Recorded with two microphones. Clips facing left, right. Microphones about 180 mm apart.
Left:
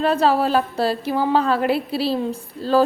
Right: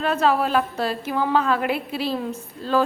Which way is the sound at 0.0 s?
35° left (ahead or behind).